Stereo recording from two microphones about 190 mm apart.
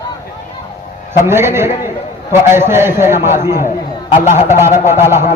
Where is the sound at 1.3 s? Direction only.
15° right (ahead or behind).